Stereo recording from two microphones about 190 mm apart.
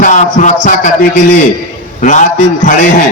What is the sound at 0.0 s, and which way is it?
Music, 40° left (ahead or behind).